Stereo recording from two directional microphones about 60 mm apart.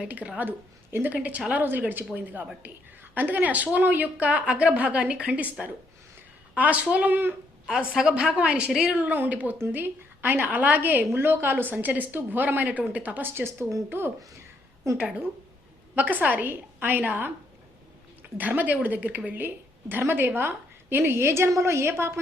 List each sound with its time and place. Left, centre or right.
0.1 s a woman's voice: right
7.7 s a woman's voice: centre
9.0 s a woman's voice: right
14.8 s a woman's voice: right
16.0 s a woman's voice: right